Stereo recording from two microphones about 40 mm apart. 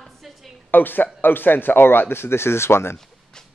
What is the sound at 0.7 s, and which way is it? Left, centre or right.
Speech, left.